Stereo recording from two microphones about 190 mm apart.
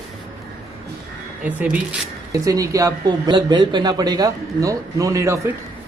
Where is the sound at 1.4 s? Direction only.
10° right (ahead or behind).